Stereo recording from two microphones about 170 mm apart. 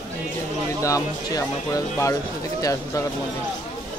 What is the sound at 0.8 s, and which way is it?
Speech, 20° left (ahead or behind).